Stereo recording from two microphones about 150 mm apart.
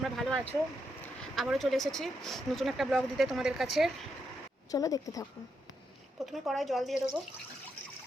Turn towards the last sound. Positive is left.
turn(degrees=0)  # may be behind; listen again after turning